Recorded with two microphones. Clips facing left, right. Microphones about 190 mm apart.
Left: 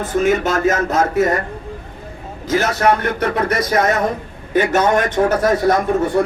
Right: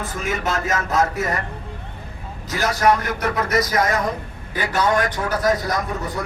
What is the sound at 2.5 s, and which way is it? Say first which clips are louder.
A man's voice: left 3 dB; 25° left (ahead or behind).